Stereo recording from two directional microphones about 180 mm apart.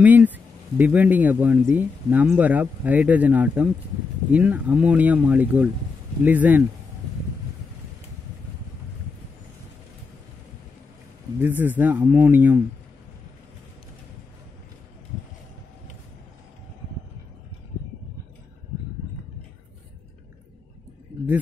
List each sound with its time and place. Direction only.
0.0 s speech: 10° right (ahead or behind)
11.3 s speech: 10° right (ahead or behind)